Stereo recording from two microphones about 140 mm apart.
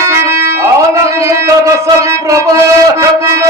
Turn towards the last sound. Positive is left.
turn(degrees=-20)  # may be behind; listen again after turning